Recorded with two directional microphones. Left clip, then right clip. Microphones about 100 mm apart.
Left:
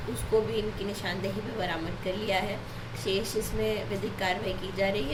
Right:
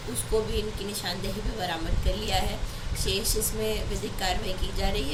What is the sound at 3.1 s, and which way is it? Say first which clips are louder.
Speech: even; 5° left (ahead or behind).